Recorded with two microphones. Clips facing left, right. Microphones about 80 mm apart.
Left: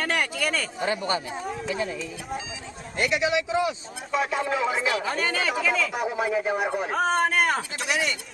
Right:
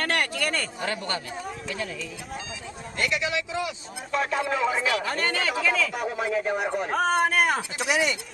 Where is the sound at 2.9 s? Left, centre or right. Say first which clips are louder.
Left 3 dB; centre.